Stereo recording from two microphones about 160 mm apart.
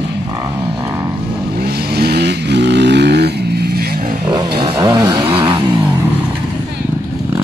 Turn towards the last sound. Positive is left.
turn(degrees=-30)  # may be behind; listen again after turning